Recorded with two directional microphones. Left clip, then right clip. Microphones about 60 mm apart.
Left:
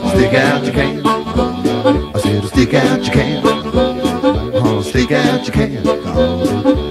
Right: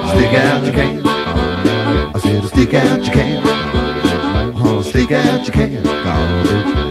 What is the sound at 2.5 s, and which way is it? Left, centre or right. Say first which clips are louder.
Music: left 1 dB; left.